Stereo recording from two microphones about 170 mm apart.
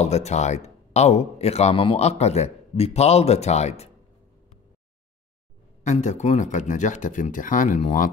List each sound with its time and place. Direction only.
0.0 s speech: 40° left (ahead or behind)
5.9 s speech: 45° left (ahead or behind)